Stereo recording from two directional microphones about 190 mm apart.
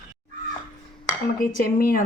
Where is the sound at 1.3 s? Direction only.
50° left (ahead or behind).